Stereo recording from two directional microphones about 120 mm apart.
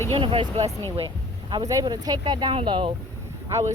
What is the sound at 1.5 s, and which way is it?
A woman's voice, 30° right (ahead or behind).